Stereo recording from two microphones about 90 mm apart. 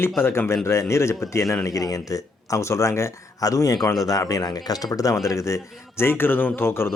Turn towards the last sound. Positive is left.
turn(degrees=30)  # may be behind; listen again after turning